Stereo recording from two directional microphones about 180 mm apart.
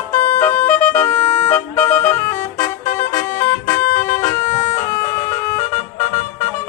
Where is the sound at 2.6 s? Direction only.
45° left (ahead or behind).